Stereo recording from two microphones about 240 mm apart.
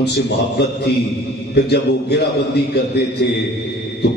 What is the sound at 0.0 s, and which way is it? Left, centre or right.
A man's voice, left.